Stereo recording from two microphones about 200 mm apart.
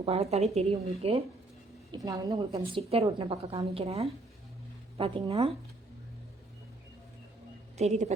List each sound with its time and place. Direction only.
0.0 s a woman's voice: 30° right (ahead or behind)
2.0 s a woman's voice: 15° right (ahead or behind)
7.8 s a woman's voice: 35° right (ahead or behind)